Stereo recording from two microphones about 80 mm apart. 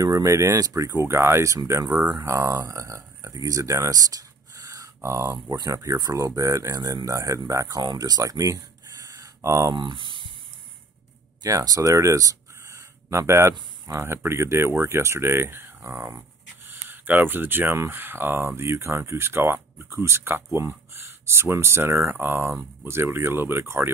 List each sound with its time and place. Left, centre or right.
0.0 s speech: right
7.6 s speech: right
8.0 s a sound: right
9.7 s speech: right
11.4 s speech: right
16.6 s speech: right